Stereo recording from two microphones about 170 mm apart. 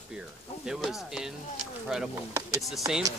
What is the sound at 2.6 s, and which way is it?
Speech, centre (ahead or behind).